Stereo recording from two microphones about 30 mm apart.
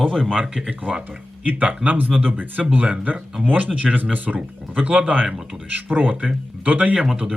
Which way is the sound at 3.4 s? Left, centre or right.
Right.